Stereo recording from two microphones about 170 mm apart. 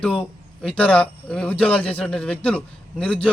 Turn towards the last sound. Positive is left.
turn(degrees=5)  # may be behind; listen again after turning